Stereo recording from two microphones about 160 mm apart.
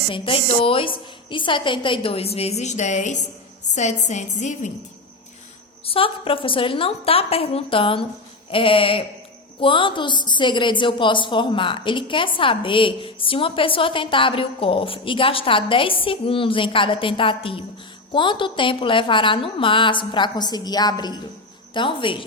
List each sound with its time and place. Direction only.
0.1 s a woman's voice: 35° left (ahead or behind)
5.8 s a woman's voice: 35° left (ahead or behind)